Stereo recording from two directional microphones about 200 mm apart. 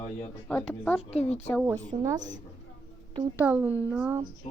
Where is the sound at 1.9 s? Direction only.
25° right (ahead or behind).